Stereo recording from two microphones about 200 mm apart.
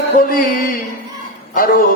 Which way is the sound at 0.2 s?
45° left (ahead or behind).